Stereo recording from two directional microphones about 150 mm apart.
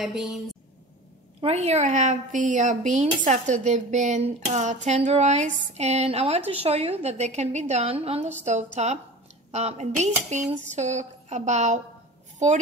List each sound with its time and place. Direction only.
0.0 s a woman's voice: 5° right (ahead or behind)
1.4 s speech: 45° right (ahead or behind)